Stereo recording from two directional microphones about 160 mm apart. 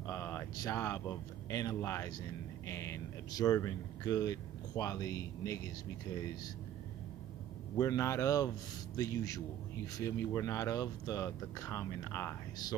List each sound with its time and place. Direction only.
0.0 s speech: 15° left (ahead or behind)
7.7 s speech: 20° left (ahead or behind)